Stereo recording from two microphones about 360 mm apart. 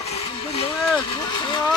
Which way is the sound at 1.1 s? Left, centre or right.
Centre.